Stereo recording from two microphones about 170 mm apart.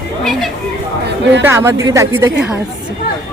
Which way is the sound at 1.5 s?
15° right (ahead or behind).